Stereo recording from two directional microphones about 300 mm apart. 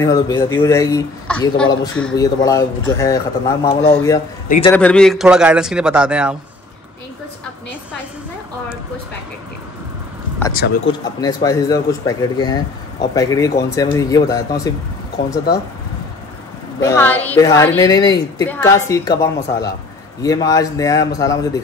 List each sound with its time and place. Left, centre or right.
0.0 s a man's voice: centre
4.5 s a man's voice: centre
4.7 s a man's voice: centre
10.9 s a man's voice: centre
16.8 s a man's voice: centre